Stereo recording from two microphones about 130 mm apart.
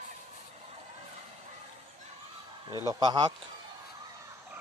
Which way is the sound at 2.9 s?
35° right (ahead or behind).